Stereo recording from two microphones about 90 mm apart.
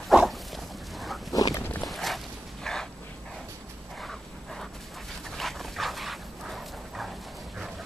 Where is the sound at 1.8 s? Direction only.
Centre (ahead or behind).